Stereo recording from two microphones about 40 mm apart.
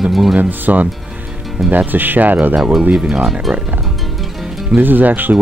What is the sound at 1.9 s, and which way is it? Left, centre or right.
Speech, right.